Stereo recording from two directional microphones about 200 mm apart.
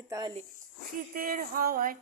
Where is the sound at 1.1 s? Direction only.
45° right (ahead or behind).